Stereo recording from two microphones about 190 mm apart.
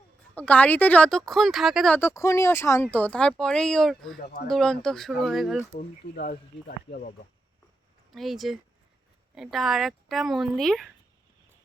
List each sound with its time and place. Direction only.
0.3 s speech: 5° left (ahead or behind)
2.0 s speech: 15° left (ahead or behind); by 5.6 s centre (ahead or behind)
6.1 s speech: 55° left (ahead or behind)
8.1 s speech: centre (ahead or behind)